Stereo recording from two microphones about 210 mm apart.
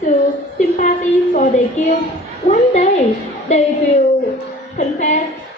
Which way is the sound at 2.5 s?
35° left (ahead or behind).